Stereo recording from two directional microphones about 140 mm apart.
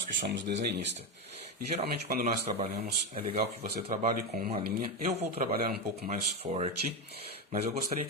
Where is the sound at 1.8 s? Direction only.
90° right.